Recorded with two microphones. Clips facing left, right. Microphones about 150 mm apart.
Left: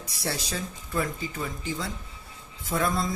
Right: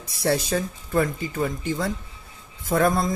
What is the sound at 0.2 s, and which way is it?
Speech, 55° right (ahead or behind).